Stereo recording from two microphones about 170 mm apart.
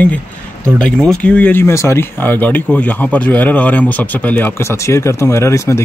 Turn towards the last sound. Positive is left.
turn(degrees=15)  # may be behind; listen again after turning